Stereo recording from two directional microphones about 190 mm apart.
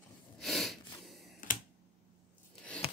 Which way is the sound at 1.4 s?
45° left (ahead or behind).